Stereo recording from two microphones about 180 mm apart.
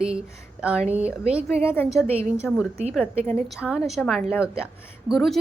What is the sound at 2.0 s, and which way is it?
Speech, 35° right (ahead or behind).